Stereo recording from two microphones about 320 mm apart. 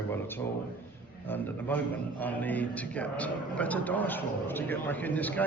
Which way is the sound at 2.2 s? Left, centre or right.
Centre.